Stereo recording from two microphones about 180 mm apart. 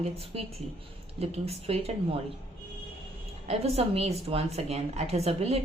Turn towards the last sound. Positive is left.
turn(degrees=-35)  # may be behind; listen again after turning